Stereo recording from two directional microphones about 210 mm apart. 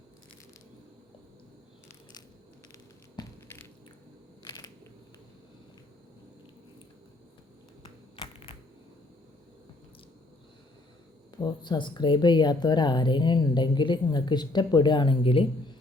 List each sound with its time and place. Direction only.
4.4 s a sound: 20° left (ahead or behind)
8.1 s typewriter: 25° left (ahead or behind)
11.3 s speech: 20° left (ahead or behind)